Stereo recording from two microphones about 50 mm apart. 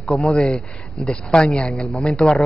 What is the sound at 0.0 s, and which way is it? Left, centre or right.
Speech, centre.